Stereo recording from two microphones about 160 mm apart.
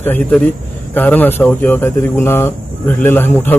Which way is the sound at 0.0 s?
10° left (ahead or behind).